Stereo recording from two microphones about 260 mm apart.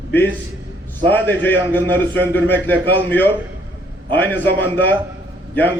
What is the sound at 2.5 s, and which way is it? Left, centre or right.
A man's voice, centre.